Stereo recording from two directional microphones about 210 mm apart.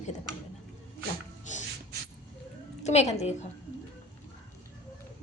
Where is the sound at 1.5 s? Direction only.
35° left (ahead or behind).